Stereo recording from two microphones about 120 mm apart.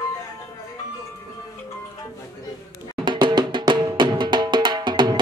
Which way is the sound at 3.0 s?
40° right (ahead or behind).